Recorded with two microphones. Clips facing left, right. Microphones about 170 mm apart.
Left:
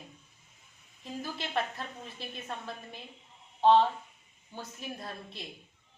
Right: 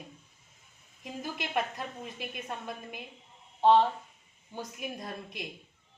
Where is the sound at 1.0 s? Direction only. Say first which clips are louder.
Even; 10° right (ahead or behind).